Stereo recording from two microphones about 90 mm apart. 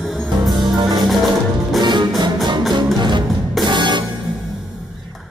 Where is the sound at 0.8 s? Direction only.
55° right (ahead or behind).